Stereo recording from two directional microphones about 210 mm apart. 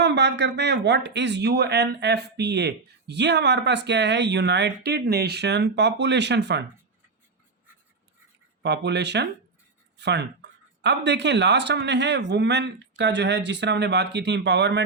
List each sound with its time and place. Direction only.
0.0 s speech: 55° right (ahead or behind)
8.6 s speech: 55° right (ahead or behind)